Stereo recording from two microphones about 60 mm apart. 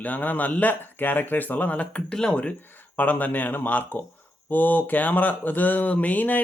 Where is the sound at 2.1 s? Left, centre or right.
Centre.